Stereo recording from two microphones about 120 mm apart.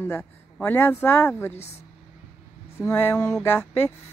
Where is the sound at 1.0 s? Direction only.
20° left (ahead or behind).